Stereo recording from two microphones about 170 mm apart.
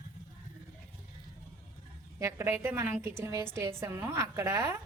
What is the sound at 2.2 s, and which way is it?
A woman's voice, 15° right (ahead or behind).